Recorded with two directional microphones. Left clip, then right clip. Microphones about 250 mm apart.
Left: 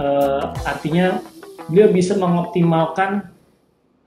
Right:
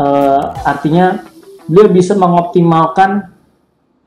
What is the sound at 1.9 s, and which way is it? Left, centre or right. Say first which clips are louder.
Speech: right 9 dB; right.